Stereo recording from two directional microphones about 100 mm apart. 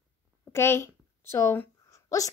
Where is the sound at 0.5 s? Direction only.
25° left (ahead or behind).